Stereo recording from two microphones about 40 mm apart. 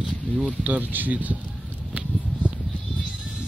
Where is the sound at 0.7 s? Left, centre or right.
Right.